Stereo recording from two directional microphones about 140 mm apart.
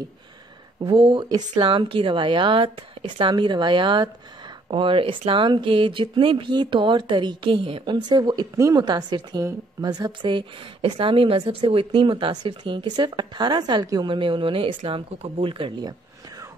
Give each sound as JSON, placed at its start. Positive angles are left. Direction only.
{"t": 0.9, "sound": "a woman's voice", "side_deg": -35}